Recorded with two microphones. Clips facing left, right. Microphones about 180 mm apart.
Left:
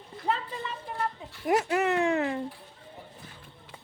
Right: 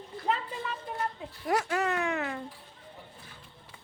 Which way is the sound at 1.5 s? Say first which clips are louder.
Left 4 dB; 20° left (ahead or behind).